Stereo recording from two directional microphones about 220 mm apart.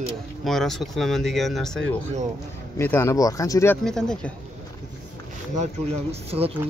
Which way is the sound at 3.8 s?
5° left (ahead or behind).